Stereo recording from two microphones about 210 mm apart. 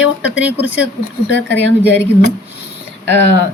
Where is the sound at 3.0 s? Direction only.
55° left (ahead or behind).